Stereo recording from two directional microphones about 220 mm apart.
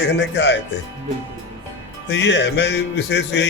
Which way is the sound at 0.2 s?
50° left (ahead or behind).